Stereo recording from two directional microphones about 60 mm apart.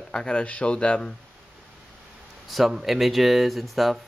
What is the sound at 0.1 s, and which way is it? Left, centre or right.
Speech, centre.